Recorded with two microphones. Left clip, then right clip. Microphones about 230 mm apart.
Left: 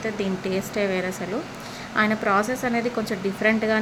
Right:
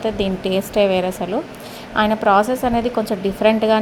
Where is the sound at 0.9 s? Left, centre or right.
Centre.